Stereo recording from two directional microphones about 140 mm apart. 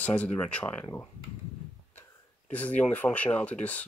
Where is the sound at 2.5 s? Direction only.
10° left (ahead or behind).